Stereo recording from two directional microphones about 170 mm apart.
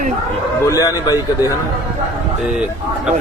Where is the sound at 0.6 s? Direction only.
20° left (ahead or behind).